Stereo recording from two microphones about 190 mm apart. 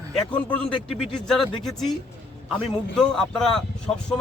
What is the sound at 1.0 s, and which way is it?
A man's voice, centre (ahead or behind).